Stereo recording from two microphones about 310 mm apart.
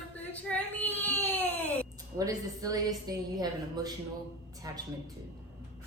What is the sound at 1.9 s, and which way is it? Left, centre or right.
A woman's voice, centre.